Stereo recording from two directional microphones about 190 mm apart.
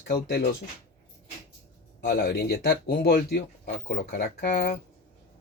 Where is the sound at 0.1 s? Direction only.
55° left (ahead or behind).